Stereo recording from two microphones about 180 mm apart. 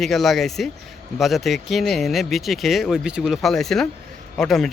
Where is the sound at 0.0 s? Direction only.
Centre (ahead or behind).